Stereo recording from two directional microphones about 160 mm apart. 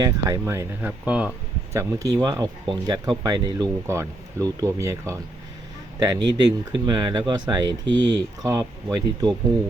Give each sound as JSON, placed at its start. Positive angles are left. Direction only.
{"t": 0.0, "sound": "speech", "side_deg": -20}
{"t": 1.7, "sound": "speech", "side_deg": -20}